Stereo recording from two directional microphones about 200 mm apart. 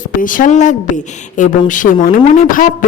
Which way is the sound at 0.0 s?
40° left (ahead or behind).